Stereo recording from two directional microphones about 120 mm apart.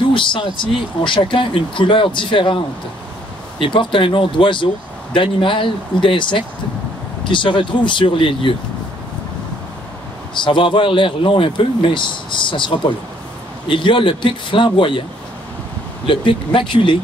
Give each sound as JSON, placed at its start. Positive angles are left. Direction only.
{"t": 0.1, "sound": "a man's voice", "side_deg": 45}
{"t": 10.3, "sound": "a man's voice", "side_deg": 45}
{"t": 16.1, "sound": "a man's voice", "side_deg": 45}